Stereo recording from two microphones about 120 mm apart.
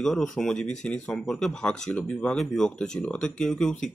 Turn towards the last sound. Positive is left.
turn(degrees=5)  # may be behind; listen again after turning